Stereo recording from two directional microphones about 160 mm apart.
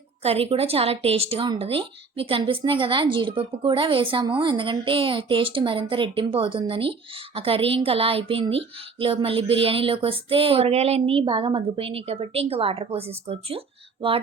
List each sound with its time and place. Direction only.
0.2 s a woman's voice: 40° right (ahead or behind)